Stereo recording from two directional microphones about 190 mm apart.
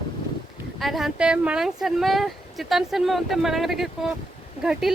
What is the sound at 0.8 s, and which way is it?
Speech, centre (ahead or behind).